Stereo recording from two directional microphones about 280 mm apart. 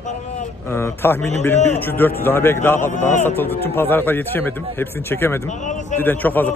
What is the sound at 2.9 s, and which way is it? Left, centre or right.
Speech, left.